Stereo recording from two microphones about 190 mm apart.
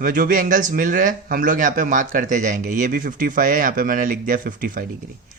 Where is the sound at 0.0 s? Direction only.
45° right (ahead or behind).